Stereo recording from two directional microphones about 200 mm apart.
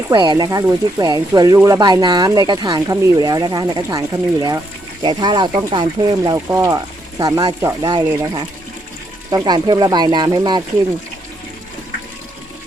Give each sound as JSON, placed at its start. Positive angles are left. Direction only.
{"t": 0.1, "sound": "speech", "side_deg": -20}